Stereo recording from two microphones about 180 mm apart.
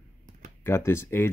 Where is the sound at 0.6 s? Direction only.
15° left (ahead or behind).